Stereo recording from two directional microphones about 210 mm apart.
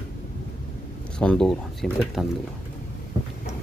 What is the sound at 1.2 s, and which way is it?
Speech, 5° left (ahead or behind).